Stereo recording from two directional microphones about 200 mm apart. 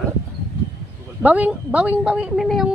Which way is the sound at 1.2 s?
5° right (ahead or behind).